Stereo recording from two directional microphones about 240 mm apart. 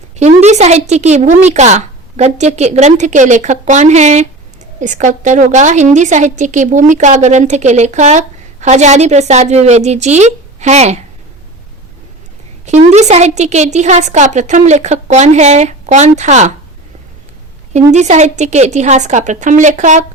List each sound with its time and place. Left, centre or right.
0.2 s a woman's voice: right
12.6 s a woman's voice: right
17.7 s a woman's voice: right